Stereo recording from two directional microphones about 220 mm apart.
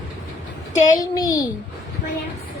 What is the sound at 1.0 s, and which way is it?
Speech, 15° left (ahead or behind).